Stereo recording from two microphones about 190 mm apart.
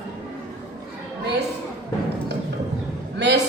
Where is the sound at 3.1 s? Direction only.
65° right (ahead or behind).